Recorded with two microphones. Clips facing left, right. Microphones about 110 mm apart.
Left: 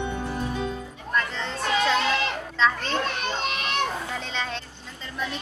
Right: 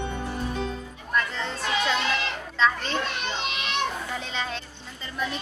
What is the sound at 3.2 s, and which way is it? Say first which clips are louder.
Children playing: left 2 dB; 45° left (ahead or behind).